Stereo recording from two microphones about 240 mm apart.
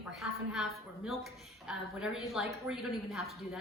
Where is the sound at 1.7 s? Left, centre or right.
Centre.